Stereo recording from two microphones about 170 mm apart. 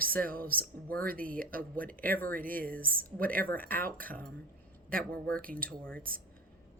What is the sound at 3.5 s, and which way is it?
Speech, 10° left (ahead or behind).